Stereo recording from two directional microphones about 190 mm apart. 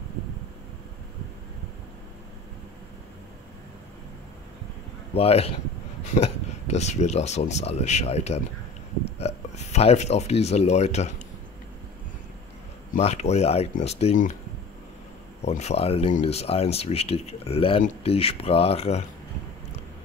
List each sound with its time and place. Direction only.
5.1 s speech: 30° left (ahead or behind)
12.9 s speech: 35° left (ahead or behind)
15.4 s speech: 35° left (ahead or behind)